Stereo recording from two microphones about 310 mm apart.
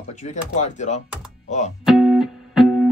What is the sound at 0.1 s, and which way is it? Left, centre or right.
Speech, left.